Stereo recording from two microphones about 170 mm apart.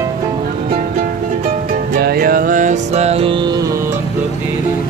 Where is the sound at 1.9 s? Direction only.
60° right (ahead or behind); by 3.7 s 25° right (ahead or behind).